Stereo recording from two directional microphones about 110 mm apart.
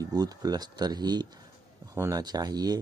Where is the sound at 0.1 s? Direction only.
35° right (ahead or behind).